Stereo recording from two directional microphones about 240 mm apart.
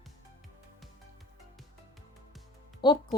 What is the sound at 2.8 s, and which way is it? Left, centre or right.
Speech, centre.